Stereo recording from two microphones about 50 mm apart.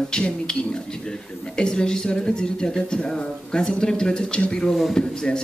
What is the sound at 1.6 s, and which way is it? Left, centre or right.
Speech, centre.